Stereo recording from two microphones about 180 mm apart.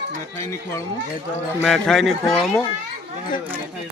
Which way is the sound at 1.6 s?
5° left (ahead or behind).